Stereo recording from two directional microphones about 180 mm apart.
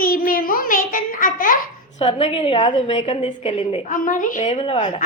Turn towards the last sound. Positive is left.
turn(degrees=35)  # may be behind; listen again after turning